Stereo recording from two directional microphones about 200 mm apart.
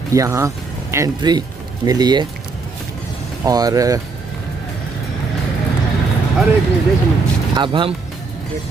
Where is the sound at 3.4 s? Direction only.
20° right (ahead or behind).